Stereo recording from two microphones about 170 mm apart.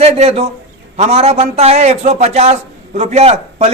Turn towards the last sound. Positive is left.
turn(degrees=-35)  # may be behind; listen again after turning